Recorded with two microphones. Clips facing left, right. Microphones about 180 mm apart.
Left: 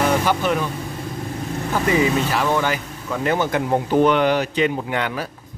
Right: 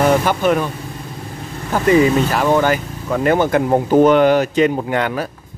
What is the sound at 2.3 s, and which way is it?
Speech, 45° right (ahead or behind).